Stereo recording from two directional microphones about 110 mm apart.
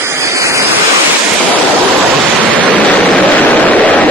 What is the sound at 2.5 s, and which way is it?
Waves, 15° left (ahead or behind).